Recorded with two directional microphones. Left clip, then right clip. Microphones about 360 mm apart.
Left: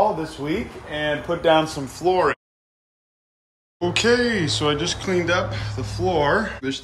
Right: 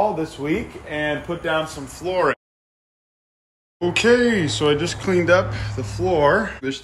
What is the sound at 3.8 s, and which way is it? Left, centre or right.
Speech, centre.